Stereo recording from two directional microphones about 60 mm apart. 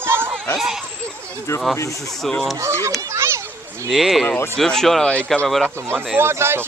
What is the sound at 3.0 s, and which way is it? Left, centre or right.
Children playing, right.